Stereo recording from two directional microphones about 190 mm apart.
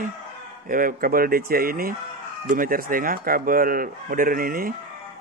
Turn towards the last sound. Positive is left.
turn(degrees=-50)  # may be behind; listen again after turning